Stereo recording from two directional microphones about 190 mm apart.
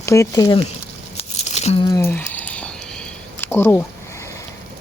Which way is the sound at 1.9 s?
15° left (ahead or behind).